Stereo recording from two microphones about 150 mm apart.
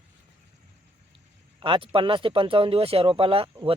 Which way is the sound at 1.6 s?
35° right (ahead or behind).